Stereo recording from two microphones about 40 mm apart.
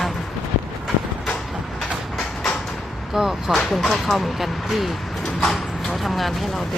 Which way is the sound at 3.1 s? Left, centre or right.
Centre.